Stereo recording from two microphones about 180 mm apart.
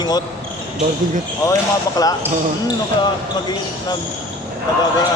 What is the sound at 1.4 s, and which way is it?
Speech, 20° left (ahead or behind).